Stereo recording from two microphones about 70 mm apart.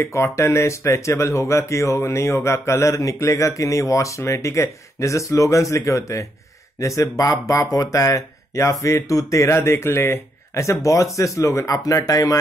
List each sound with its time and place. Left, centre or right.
0.0 s speech: left